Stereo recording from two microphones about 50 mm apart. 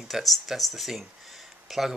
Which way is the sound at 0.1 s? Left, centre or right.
Centre.